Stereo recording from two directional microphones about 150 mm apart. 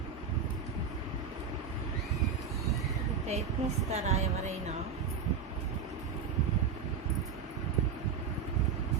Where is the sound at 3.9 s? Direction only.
50° right (ahead or behind).